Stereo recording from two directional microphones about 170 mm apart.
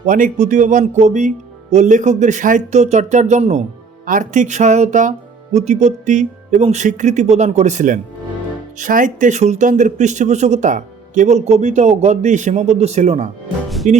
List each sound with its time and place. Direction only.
0.0 s speech: 50° right (ahead or behind)